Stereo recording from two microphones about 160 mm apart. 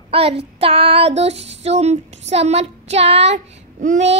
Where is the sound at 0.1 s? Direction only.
40° right (ahead or behind).